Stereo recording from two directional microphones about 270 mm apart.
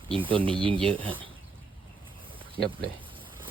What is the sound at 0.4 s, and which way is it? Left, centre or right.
Speech, centre.